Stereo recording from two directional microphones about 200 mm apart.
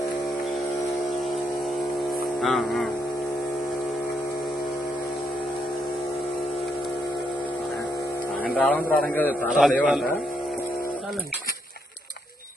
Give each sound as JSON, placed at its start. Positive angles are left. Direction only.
{"t": 2.4, "sound": "a man's voice", "side_deg": 0}
{"t": 8.4, "sound": "a man's voice", "side_deg": 5}